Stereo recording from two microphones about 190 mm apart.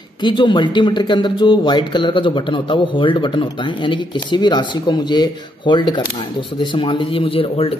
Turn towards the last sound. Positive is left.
turn(degrees=30)  # may be behind; listen again after turning